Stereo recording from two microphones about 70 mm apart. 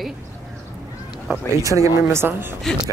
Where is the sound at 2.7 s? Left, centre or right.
Centre.